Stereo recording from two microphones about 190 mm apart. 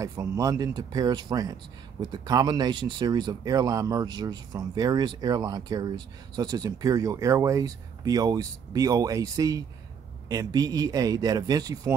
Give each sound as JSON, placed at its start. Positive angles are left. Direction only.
{"t": 0.0, "sound": "speech", "side_deg": -15}